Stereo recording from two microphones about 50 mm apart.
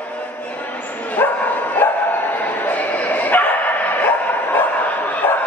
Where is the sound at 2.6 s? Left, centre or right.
Left.